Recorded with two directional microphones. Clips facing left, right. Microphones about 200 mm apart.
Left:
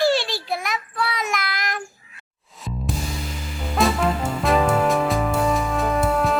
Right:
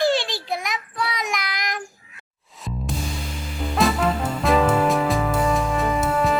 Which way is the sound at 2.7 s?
Centre (ahead or behind).